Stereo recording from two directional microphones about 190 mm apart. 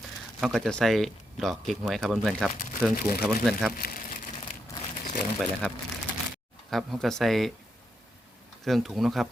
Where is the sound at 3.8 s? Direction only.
55° left (ahead or behind).